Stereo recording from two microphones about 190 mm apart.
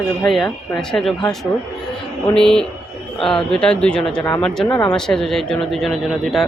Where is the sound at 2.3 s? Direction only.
5° left (ahead or behind).